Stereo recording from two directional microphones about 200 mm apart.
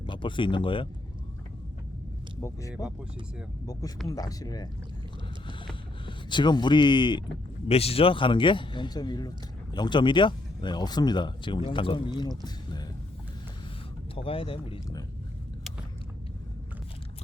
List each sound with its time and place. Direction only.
0.0 s speech: 25° left (ahead or behind)
2.4 s speech: 15° left (ahead or behind)
6.1 s speech: 20° left (ahead or behind)
14.2 s speech: 25° left (ahead or behind)